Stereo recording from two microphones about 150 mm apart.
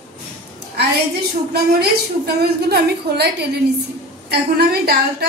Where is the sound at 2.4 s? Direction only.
90° right.